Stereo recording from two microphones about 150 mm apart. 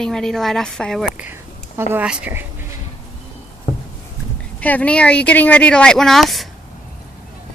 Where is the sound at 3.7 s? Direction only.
45° left (ahead or behind).